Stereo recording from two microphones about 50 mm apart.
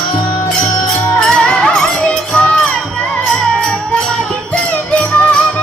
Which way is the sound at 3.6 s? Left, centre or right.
Centre.